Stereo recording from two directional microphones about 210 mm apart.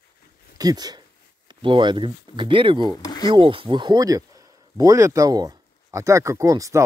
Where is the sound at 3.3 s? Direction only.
25° right (ahead or behind).